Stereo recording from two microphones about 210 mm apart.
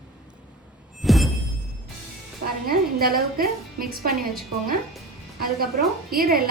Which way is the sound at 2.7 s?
45° right (ahead or behind).